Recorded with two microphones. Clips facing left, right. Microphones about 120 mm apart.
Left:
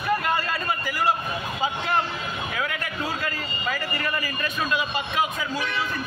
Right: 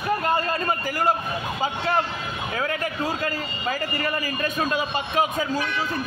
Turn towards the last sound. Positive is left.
turn(degrees=-40)  # may be behind; listen again after turning